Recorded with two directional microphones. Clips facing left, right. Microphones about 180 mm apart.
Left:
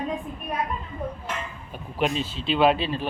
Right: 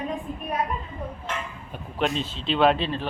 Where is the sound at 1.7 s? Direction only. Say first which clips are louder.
Left 1 dB; 5° left (ahead or behind).